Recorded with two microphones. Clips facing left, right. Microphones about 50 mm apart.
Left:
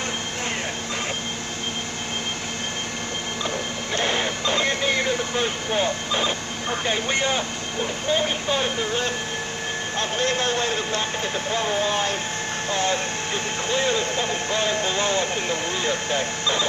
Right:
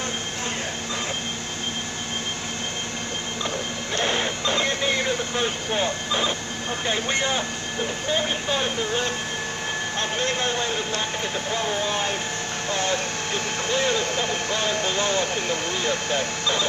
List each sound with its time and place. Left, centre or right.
3.9 s printer: left
5.3 s vehicle: centre
8.1 s speech: centre
10.2 s speech: right
12.6 s speech: left